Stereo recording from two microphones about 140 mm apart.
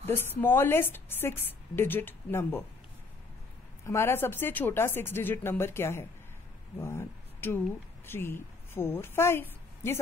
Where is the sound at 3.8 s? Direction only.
20° left (ahead or behind).